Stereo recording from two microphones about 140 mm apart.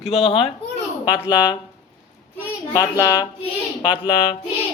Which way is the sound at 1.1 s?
30° left (ahead or behind).